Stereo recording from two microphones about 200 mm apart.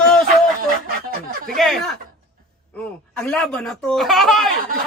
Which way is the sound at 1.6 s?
Centre (ahead or behind).